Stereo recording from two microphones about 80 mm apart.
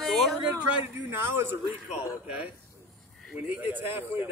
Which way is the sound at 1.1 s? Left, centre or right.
Right.